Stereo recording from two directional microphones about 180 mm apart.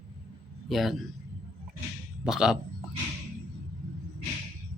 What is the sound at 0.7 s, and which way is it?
Speech, centre (ahead or behind).